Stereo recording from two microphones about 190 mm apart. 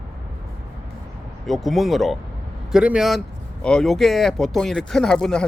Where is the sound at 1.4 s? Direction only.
Centre (ahead or behind).